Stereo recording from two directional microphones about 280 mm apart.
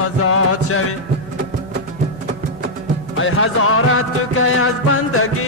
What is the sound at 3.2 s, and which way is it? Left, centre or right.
Music, left.